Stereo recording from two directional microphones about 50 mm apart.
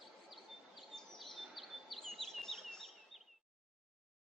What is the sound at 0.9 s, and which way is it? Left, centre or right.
Chirp, centre.